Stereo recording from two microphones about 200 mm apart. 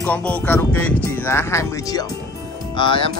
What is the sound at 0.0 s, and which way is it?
Speech, 5° left (ahead or behind).